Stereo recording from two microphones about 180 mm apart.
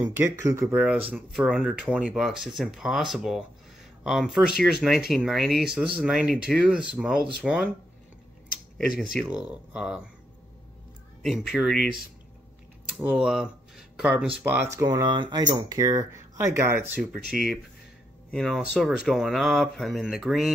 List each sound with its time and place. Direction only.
0.0 s speech: 15° right (ahead or behind)
8.7 s speech: centre (ahead or behind)
11.2 s speech: centre (ahead or behind)
12.9 s speech: 5° right (ahead or behind)
18.3 s speech: centre (ahead or behind)